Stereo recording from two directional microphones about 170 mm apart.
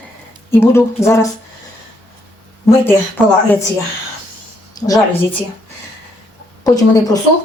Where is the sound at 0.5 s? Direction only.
15° left (ahead or behind).